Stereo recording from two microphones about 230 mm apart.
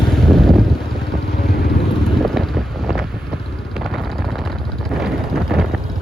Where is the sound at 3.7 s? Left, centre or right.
Centre.